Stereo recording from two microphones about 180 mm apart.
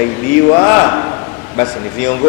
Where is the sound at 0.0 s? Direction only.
15° left (ahead or behind).